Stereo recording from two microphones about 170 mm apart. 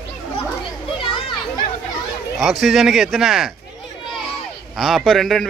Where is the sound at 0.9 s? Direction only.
30° left (ahead or behind).